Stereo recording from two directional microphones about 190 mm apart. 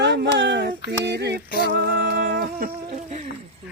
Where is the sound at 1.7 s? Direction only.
60° right (ahead or behind).